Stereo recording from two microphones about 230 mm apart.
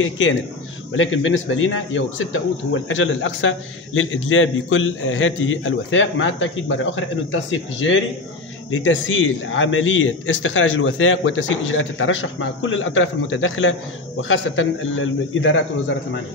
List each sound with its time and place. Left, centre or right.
0.0 s a man's voice: left
8.6 s a man's voice: left